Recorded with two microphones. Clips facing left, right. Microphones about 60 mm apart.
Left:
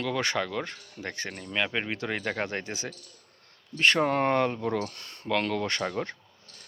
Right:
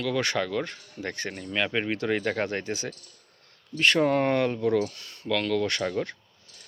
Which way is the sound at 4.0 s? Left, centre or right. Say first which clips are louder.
Right 1 dB; centre.